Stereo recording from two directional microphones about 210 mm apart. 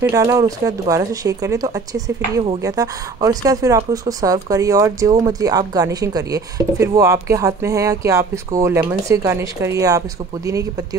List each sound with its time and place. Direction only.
0.1 s a woman's voice: 15° right (ahead or behind)